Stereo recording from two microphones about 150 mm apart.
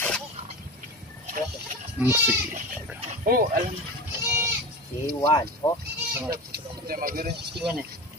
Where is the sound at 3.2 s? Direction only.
80° right.